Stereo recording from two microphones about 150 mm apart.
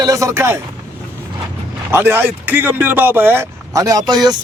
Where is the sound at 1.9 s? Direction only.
15° right (ahead or behind).